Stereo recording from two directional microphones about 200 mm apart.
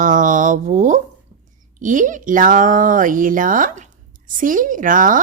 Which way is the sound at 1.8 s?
40° right (ahead or behind).